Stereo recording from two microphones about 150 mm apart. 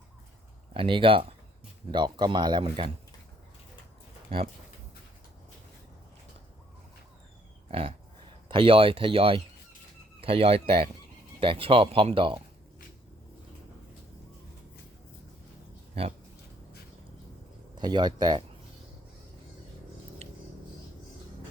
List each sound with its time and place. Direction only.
0.7 s speech: 35° right (ahead or behind)
7.7 s pig: 40° right (ahead or behind)
8.4 s speech: 35° right (ahead or behind)
16.0 s speech: 40° right (ahead or behind)
17.7 s speech: 30° right (ahead or behind)